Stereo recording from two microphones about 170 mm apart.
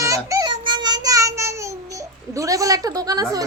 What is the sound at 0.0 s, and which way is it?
Child singing, 20° right (ahead or behind).